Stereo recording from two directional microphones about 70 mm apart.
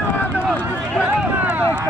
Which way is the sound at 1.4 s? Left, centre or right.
Centre.